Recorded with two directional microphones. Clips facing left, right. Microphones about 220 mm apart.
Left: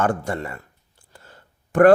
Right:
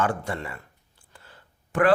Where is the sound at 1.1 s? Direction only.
45° left (ahead or behind).